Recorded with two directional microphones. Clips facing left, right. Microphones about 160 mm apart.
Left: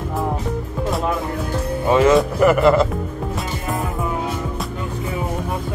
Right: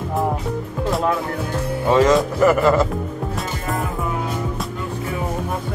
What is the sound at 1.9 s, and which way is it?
Speech, 10° left (ahead or behind).